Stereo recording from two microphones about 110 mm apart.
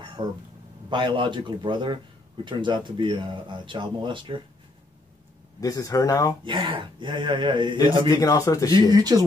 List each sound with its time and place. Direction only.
0.2 s speech: 60° right (ahead or behind)
5.6 s speech: 30° left (ahead or behind)
6.4 s speech: 45° right (ahead or behind)
8.1 s speech: 35° left (ahead or behind)
8.9 s speech: 35° right (ahead or behind)